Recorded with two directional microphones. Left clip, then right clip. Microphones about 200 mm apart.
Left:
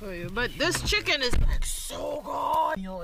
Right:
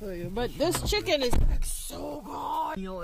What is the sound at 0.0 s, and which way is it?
Speech, 5° right (ahead or behind).